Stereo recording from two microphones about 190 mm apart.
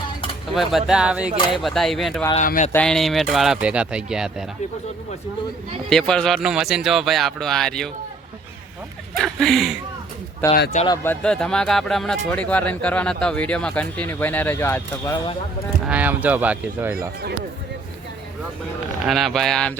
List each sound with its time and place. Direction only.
0.5 s speech: centre (ahead or behind)
2.3 s speech: 40° left (ahead or behind)
2.7 s speech: 5° left (ahead or behind)
5.9 s speech: 5° left (ahead or behind)
9.1 s speech: centre (ahead or behind)
10.4 s speech: 10° left (ahead or behind)
15.9 s speech: 10° right (ahead or behind)
19.0 s speech: centre (ahead or behind)